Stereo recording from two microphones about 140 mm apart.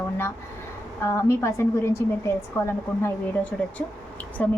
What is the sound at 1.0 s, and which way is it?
A woman's voice, 20° left (ahead or behind).